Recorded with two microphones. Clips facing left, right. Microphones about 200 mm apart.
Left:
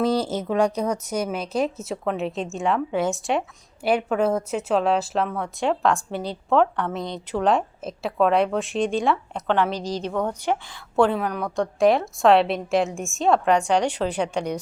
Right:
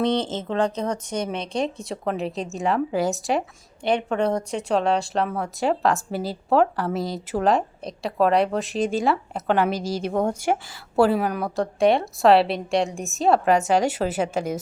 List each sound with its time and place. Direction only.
0.0 s a woman's voice: 5° left (ahead or behind); by 10.1 s 10° right (ahead or behind)
10.1 s speech: 35° right (ahead or behind)
10.4 s a woman's voice: 10° right (ahead or behind)